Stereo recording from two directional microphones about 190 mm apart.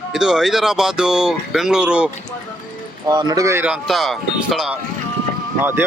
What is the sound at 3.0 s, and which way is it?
Speech, 20° right (ahead or behind).